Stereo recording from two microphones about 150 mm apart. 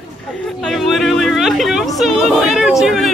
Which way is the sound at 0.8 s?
Centre (ahead or behind).